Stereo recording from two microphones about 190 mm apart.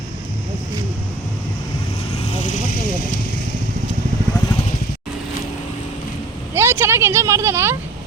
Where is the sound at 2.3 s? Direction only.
35° left (ahead or behind).